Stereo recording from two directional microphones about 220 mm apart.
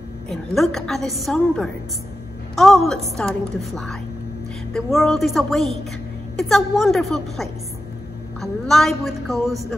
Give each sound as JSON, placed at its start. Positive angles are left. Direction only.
{"t": 0.3, "sound": "a woman's voice", "side_deg": 0}